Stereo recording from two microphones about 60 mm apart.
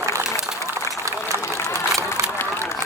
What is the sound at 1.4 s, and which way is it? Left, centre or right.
Run, left.